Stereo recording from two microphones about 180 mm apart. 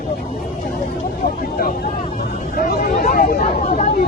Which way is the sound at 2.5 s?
55° left (ahead or behind).